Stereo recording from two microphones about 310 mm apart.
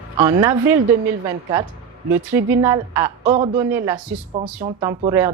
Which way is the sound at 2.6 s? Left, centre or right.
Centre.